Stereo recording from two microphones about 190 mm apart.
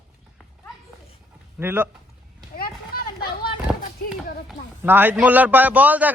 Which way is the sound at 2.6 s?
50° left (ahead or behind).